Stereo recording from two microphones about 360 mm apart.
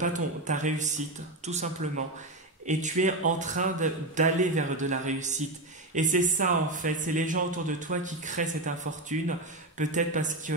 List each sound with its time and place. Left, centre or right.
0.0 s a man's voice: right